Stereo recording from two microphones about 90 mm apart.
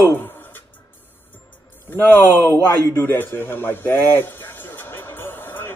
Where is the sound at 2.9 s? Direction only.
25° left (ahead or behind).